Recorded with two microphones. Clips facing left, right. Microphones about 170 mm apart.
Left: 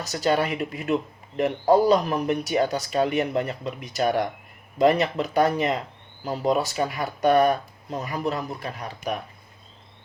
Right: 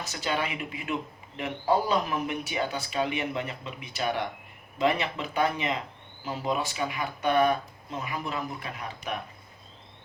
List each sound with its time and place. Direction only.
0.0 s speech: 40° left (ahead or behind)